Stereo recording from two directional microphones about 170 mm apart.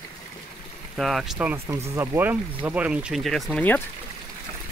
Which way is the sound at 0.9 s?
Centre (ahead or behind).